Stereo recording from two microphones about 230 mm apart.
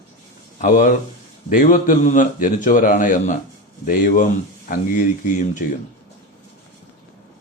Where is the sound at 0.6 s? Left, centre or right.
Left.